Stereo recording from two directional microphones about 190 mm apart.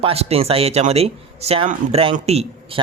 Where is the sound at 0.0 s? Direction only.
30° right (ahead or behind).